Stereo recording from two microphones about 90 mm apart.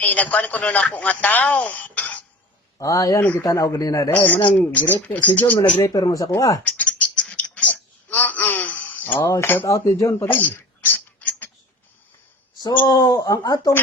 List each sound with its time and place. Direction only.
0.0 s speech: 15° left (ahead or behind)
2.7 s speech: 40° left (ahead or behind)
3.2 s speech: 20° left (ahead or behind)
3.4 s speech: 35° left (ahead or behind)
4.1 s speech: 20° left (ahead or behind)
5.8 s speech: 40° left (ahead or behind)
6.7 s a sound: 15° left (ahead or behind)
9.3 s speech: 25° left (ahead or behind)
9.6 s speech: 40° left (ahead or behind)
10.2 s a sound: 20° left (ahead or behind)
12.8 s speech: 40° left (ahead or behind)